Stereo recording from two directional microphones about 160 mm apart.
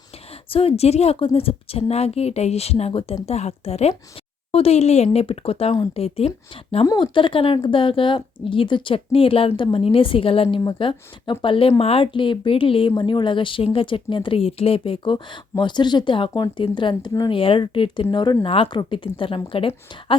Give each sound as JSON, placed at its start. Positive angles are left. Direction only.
{"t": 0.5, "sound": "speech", "side_deg": 40}
{"t": 6.8, "sound": "speech", "side_deg": 25}